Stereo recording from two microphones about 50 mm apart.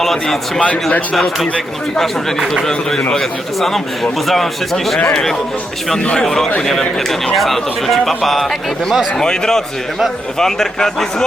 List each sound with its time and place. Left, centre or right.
0.0 s speech: centre
0.6 s speech: left
3.1 s speech: centre
6.2 s a man's voice: centre
9.1 s a man's voice: centre